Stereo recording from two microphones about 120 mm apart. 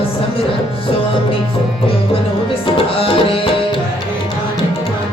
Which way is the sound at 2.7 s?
50° left (ahead or behind).